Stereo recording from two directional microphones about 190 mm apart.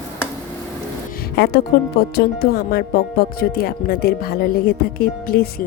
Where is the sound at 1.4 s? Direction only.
60° left (ahead or behind).